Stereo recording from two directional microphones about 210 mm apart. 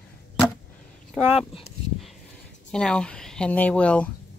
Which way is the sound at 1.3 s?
30° left (ahead or behind).